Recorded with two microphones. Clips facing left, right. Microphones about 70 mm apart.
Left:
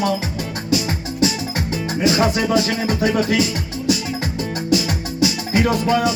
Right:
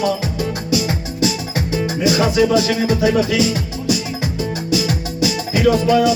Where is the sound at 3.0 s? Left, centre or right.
Left.